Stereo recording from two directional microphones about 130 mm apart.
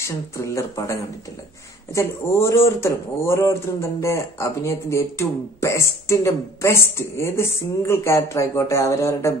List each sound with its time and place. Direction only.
0.0 s speech: 25° left (ahead or behind)
2.0 s speech: 20° left (ahead or behind)